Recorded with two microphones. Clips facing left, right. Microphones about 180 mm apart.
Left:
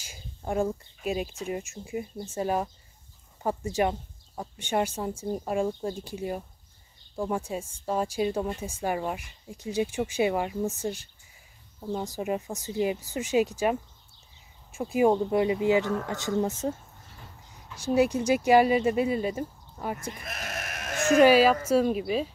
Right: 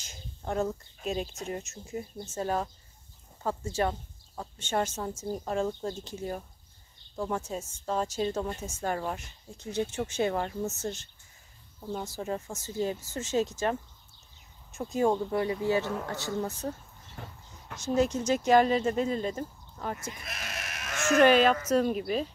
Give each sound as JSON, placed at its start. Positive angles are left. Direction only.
{"t": 0.0, "sound": "a woman's voice", "side_deg": 10}
{"t": 12.1, "sound": "a woman's voice", "side_deg": 15}
{"t": 17.2, "sound": "vehicle", "side_deg": -70}
{"t": 17.7, "sound": "a woman's voice", "side_deg": 10}
{"t": 20.2, "sound": "sheep", "side_deg": 50}
{"t": 21.1, "sound": "a woman's voice", "side_deg": 10}